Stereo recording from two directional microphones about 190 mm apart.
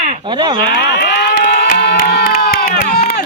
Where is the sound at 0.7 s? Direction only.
55° left (ahead or behind).